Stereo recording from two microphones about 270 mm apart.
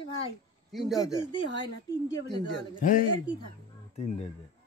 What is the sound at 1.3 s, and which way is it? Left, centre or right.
Speech, centre.